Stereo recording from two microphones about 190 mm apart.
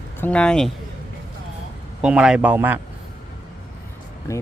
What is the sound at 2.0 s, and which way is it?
Speech, 5° right (ahead or behind).